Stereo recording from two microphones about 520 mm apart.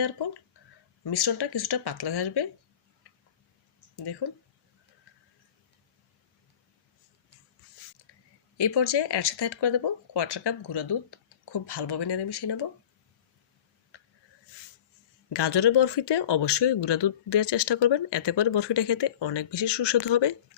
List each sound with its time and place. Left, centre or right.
1.0 s speech: left
3.9 s speech: left
8.5 s speech: left
15.3 s speech: left